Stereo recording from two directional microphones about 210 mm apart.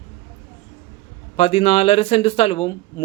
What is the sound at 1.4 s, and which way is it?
Speech, 30° left (ahead or behind).